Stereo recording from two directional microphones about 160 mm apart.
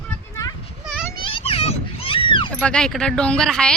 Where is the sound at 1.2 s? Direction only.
35° left (ahead or behind).